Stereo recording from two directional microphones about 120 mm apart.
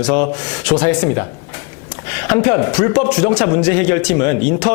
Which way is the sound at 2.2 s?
15° left (ahead or behind).